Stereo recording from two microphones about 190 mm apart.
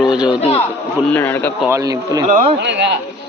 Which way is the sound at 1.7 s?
20° right (ahead or behind).